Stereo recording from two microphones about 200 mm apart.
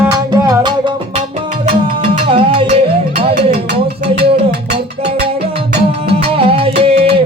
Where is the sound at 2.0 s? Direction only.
25° right (ahead or behind).